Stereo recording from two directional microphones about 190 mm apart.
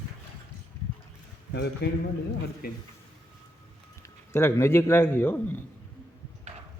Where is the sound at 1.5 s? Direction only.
60° left (ahead or behind).